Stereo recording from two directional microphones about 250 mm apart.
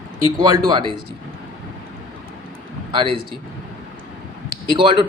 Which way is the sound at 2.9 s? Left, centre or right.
Centre.